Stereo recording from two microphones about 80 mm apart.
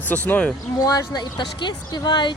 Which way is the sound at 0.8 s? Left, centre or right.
Left.